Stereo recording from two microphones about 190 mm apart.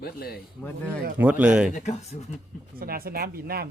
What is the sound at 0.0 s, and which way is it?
Speech, 55° left (ahead or behind).